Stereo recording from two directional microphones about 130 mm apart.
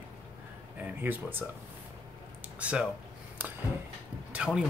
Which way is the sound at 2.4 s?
10° right (ahead or behind).